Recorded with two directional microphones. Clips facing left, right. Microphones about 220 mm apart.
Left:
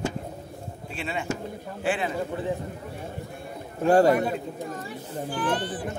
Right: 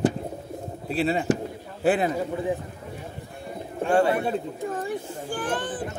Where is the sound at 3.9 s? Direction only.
40° left (ahead or behind).